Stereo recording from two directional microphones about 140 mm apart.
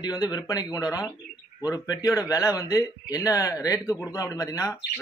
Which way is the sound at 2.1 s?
25° left (ahead or behind).